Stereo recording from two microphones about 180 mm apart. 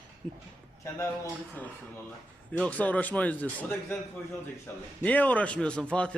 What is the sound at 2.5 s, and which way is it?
Speech, 5° left (ahead or behind).